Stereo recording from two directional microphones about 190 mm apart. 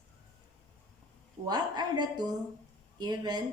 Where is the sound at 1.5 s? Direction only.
20° right (ahead or behind).